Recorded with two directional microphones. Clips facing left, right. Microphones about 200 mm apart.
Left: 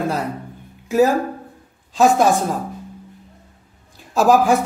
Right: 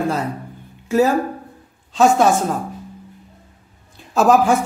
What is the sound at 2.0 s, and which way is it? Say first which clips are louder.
Speech: even; centre (ahead or behind).